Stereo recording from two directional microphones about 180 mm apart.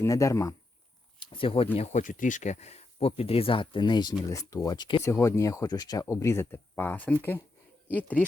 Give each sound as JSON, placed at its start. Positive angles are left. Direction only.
{"t": 0.0, "sound": "speech", "side_deg": 15}
{"t": 1.2, "sound": "speech", "side_deg": 30}